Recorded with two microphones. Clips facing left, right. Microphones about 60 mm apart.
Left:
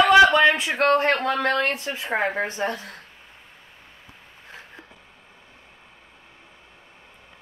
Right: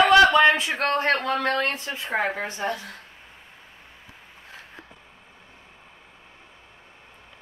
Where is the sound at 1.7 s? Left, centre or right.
Left.